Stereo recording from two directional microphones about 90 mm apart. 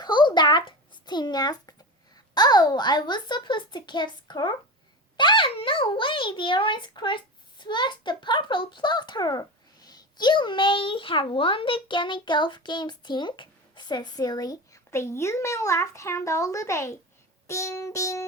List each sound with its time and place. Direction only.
0.0 s a sound: 55° left (ahead or behind)
2.1 s a child's voice: 50° left (ahead or behind)
14.8 s speech: 30° left (ahead or behind)